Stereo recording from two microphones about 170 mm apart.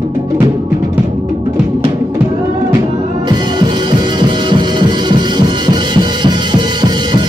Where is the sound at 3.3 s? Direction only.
25° right (ahead or behind).